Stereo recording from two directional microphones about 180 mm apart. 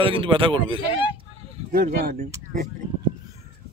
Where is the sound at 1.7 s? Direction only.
55° right (ahead or behind).